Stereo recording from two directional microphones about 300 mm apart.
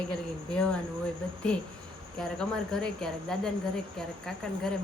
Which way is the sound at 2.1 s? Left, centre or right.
Centre.